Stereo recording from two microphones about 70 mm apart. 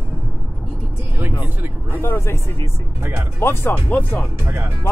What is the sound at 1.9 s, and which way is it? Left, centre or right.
Speech, left.